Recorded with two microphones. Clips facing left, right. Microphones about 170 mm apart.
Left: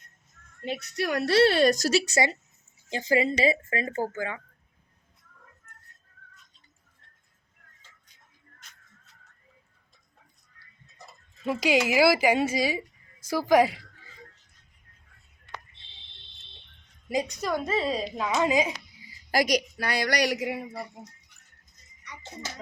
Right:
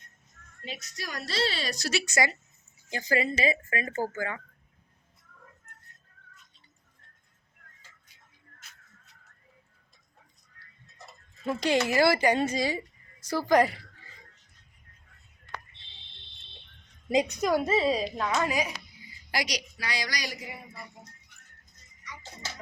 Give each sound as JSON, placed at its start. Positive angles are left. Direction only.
{"t": 0.6, "sound": "a woman's voice", "side_deg": 60}
{"t": 11.4, "sound": "a woman's voice", "side_deg": 5}
{"t": 17.4, "sound": "a woman's voice", "side_deg": -5}
{"t": 18.2, "sound": "speech", "side_deg": 20}
{"t": 19.3, "sound": "a woman's voice", "side_deg": 50}